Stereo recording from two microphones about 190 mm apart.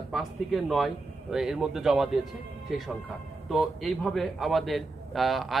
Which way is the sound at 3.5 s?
Centre (ahead or behind).